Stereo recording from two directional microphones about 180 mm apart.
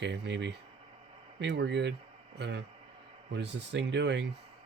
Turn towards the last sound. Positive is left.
turn(degrees=-75)  # may be behind; listen again after turning